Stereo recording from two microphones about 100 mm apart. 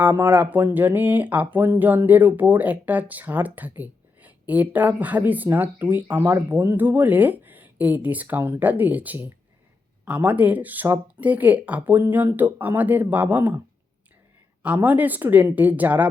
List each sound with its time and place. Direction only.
0.0 s speech: 20° right (ahead or behind)
14.6 s speech: 15° right (ahead or behind)